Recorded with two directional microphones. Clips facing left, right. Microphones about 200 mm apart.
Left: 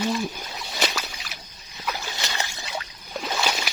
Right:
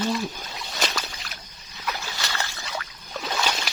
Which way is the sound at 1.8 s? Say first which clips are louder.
Left 1 dB; 15° left (ahead or behind).